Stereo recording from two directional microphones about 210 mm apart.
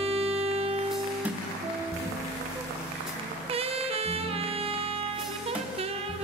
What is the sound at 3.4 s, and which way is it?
Music, 30° right (ahead or behind).